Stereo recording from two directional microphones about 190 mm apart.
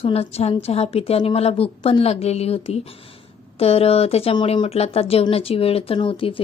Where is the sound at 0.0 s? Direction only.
30° left (ahead or behind).